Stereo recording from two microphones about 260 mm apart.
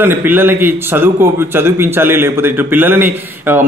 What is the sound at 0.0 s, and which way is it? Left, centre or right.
A man's voice, centre.